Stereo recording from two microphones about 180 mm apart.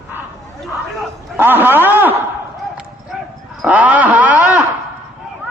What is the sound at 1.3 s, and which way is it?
Speech, 10° right (ahead or behind).